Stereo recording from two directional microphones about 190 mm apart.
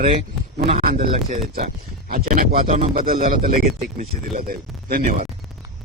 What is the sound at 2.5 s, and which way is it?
Speech, 35° right (ahead or behind).